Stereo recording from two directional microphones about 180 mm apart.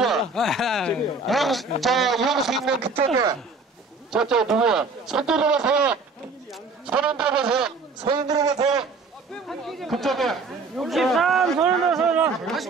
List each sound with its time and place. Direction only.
0.0 s speech: centre (ahead or behind)
4.1 s speech: 5° right (ahead or behind)
8.0 s a man's voice: 25° right (ahead or behind)
9.3 s speech: centre (ahead or behind)